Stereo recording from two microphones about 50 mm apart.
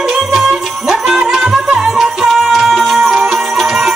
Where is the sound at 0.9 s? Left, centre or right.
Centre.